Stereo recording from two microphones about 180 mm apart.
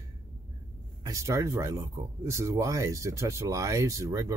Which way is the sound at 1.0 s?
15° right (ahead or behind).